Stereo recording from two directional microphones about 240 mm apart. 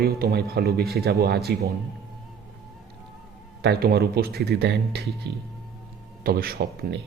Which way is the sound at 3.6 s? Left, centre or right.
Right.